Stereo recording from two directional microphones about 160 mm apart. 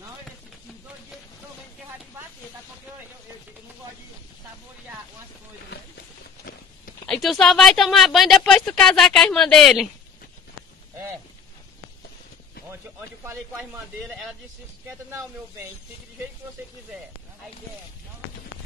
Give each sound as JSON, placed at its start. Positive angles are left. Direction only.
{"t": 7.1, "sound": "speech", "side_deg": 0}
{"t": 13.2, "sound": "a man's voice", "side_deg": -20}